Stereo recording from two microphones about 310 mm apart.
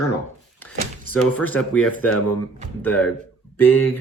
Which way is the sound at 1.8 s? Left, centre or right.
Left.